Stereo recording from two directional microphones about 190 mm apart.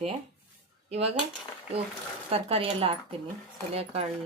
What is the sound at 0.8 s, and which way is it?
Speech, 30° right (ahead or behind).